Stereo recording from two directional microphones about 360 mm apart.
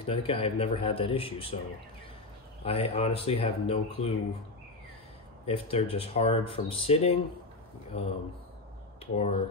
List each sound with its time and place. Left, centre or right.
0.0 s speech: centre
2.6 s speech: centre
5.5 s speech: centre